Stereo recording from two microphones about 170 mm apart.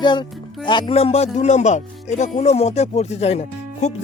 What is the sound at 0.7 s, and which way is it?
Speech, 25° left (ahead or behind).